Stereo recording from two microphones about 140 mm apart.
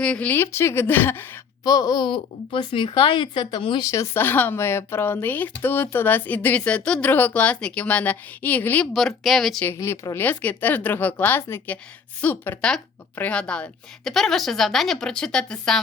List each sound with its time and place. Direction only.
0.0 s speech: 10° left (ahead or behind)
1.6 s speech: 30° left (ahead or behind)
3.8 s speech: 20° left (ahead or behind)
8.9 s a woman's voice: centre (ahead or behind)
9.6 s a woman's voice: 20° left (ahead or behind)